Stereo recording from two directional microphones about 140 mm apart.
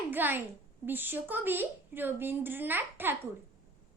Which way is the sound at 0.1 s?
15° right (ahead or behind).